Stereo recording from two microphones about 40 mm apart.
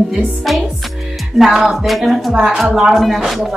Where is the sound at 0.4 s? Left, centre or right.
Centre.